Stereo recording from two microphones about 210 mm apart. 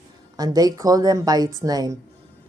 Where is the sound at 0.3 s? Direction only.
20° right (ahead or behind).